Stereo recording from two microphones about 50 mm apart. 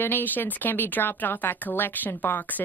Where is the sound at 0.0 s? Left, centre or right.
Left.